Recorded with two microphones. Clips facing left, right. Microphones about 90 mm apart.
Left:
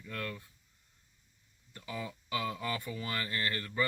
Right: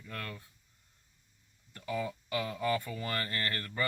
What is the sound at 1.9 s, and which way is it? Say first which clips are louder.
Speech: right 4 dB; 45° right (ahead or behind).